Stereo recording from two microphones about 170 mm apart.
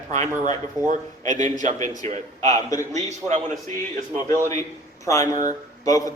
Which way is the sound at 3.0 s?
45° right (ahead or behind).